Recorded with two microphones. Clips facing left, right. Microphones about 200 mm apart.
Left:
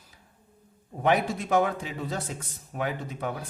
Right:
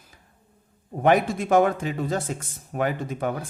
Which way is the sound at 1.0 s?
50° right (ahead or behind).